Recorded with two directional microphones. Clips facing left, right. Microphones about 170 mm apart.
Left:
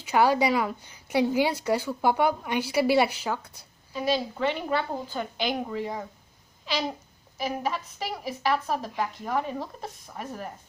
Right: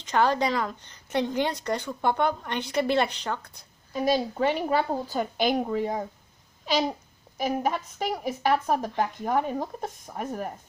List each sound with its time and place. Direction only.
0.0 s a woman's voice: 10° left (ahead or behind)
3.9 s speech: 45° right (ahead or behind)
7.3 s speech: 50° right (ahead or behind)